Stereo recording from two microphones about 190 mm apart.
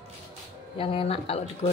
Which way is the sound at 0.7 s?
30° left (ahead or behind).